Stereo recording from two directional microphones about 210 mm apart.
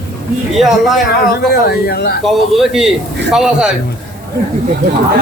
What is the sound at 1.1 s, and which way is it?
Speech, 50° left (ahead or behind).